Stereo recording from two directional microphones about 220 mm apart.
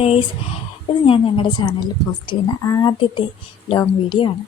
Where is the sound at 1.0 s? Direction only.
25° left (ahead or behind).